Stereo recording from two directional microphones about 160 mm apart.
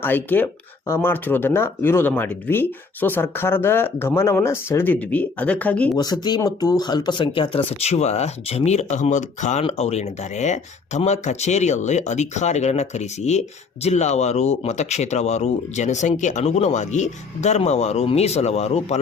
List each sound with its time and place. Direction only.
0.0 s speech: 10° left (ahead or behind)
6.0 s speech: 25° left (ahead or behind); by 18.9 s 40° left (ahead or behind)